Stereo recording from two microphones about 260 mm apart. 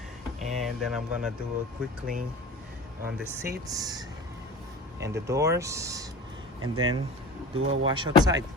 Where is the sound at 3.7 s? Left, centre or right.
Centre.